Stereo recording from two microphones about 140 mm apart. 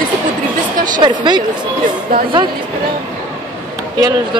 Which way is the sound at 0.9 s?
35° right (ahead or behind).